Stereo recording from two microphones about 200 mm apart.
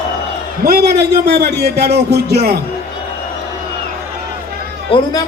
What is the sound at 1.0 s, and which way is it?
A man's voice, 55° right (ahead or behind).